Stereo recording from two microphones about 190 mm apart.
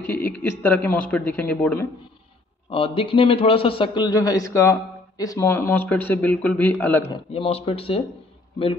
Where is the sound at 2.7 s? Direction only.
30° left (ahead or behind); by 7.0 s 10° left (ahead or behind).